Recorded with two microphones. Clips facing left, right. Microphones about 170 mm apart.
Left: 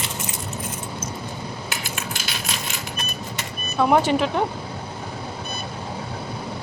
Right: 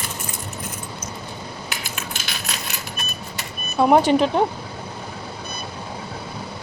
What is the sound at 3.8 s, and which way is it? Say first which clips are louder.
Speech: right 3 dB; 25° right (ahead or behind).